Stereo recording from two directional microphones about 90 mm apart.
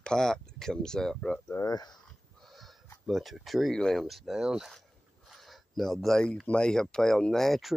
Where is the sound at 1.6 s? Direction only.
45° left (ahead or behind).